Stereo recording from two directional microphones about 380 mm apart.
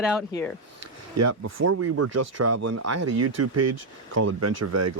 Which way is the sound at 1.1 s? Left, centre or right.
Right.